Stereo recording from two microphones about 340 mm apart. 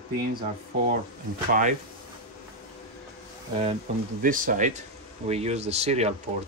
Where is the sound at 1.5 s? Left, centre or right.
Right.